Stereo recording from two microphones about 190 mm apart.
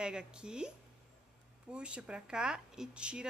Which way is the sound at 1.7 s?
5° right (ahead or behind).